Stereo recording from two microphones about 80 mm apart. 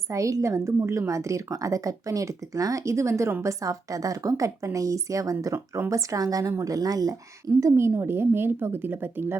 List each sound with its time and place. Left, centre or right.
0.1 s a woman's voice: right
7.6 s a woman's voice: right